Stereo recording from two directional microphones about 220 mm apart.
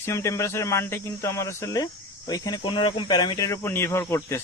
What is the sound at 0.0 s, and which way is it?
A man's voice, 10° left (ahead or behind).